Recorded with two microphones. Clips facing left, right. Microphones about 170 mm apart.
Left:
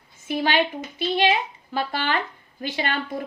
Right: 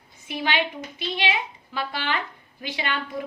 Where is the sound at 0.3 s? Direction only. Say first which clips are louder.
Left 4 dB; 40° left (ahead or behind).